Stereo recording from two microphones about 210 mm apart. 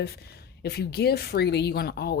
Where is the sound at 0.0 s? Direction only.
50° left (ahead or behind).